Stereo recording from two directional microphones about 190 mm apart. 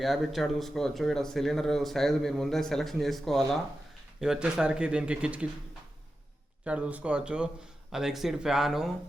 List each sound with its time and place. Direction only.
0.0 s speech: centre (ahead or behind)
6.7 s speech: 5° right (ahead or behind)